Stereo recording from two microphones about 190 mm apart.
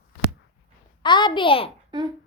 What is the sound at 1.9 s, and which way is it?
Beatboxing, 25° right (ahead or behind).